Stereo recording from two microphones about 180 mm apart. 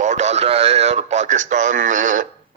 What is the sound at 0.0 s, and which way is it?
A man's voice, 40° right (ahead or behind).